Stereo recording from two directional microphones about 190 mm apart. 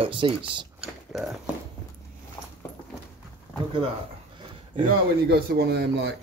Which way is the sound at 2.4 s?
10° left (ahead or behind).